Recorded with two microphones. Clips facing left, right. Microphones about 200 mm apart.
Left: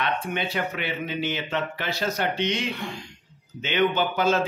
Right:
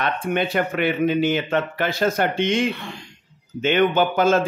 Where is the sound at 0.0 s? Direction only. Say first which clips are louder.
Right 5 dB; 50° right (ahead or behind).